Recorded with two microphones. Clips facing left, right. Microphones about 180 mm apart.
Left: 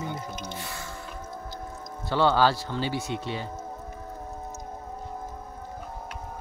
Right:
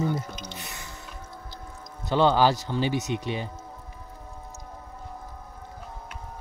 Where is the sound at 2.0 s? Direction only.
20° right (ahead or behind).